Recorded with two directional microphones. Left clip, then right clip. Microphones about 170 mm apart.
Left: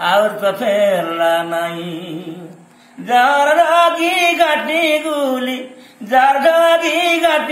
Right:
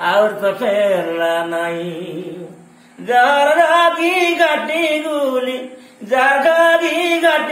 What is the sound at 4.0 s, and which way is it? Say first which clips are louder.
Music: left 1 dB; 15° right (ahead or behind).